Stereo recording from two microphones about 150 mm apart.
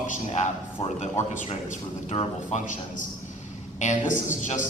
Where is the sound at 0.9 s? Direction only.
55° left (ahead or behind).